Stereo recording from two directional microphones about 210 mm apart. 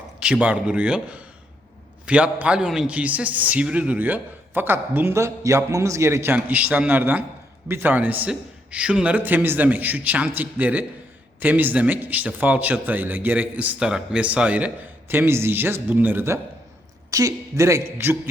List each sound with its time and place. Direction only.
0.2 s a man's voice: 5° right (ahead or behind)